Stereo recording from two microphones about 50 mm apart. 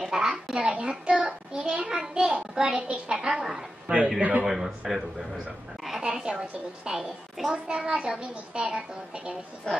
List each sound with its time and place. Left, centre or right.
0.0 s a child's voice: centre
4.2 s a woman's voice: right
4.5 s a man's voice: centre
5.9 s a sound: centre
6.4 s a child's voice: centre
9.7 s a woman's voice: centre